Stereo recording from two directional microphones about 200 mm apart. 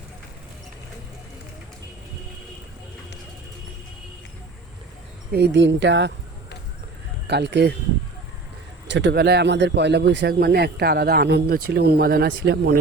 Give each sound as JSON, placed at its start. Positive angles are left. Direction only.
{"t": 5.3, "sound": "speech", "side_deg": -60}
{"t": 7.3, "sound": "speech", "side_deg": -60}
{"t": 8.9, "sound": "speech", "side_deg": -60}